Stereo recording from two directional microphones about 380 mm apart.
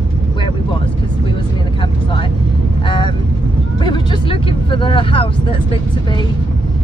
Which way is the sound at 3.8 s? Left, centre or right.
Centre.